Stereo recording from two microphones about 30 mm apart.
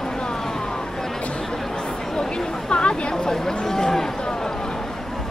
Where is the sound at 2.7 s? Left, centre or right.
Left.